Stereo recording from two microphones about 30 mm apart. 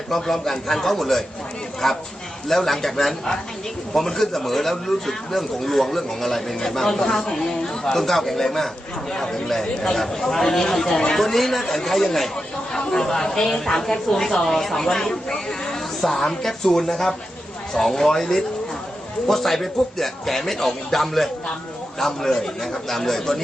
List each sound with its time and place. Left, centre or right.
0.1 s a man's voice: centre
9.1 s speech: left
9.9 s a man's voice: centre
14.8 s speech: left
16.0 s a man's voice: centre